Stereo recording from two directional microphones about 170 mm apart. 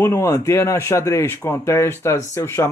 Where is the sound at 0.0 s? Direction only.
15° left (ahead or behind).